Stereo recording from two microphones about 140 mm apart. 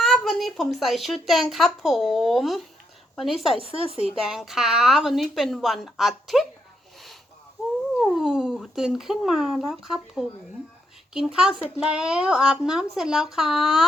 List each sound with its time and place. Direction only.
0.0 s a woman's voice: centre (ahead or behind)
3.6 s speech: 40° right (ahead or behind)
4.0 s a woman's voice: 5° right (ahead or behind)
8.0 s a woman's voice: 5° right (ahead or behind)